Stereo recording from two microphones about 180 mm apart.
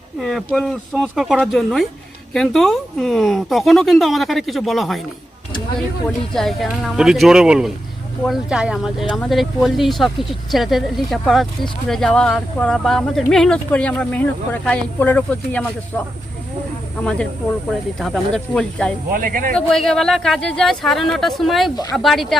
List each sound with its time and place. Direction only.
0.2 s speech: centre (ahead or behind)
6.3 s speech: centre (ahead or behind)
17.0 s speech: 5° left (ahead or behind)
19.1 s speech: 50° right (ahead or behind)
19.5 s speech: centre (ahead or behind)